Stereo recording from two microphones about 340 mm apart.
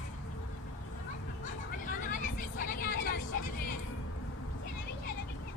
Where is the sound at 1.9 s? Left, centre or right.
Left.